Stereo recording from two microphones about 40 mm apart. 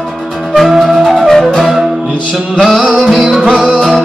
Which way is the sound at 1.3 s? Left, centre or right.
Centre.